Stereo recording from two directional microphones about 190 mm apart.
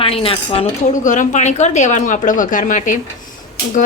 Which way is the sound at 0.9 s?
40° left (ahead or behind).